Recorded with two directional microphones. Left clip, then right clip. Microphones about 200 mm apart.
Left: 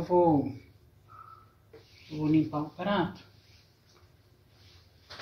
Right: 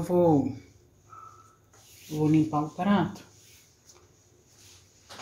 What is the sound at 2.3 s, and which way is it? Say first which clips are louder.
Speech: right 2 dB; 55° right (ahead or behind).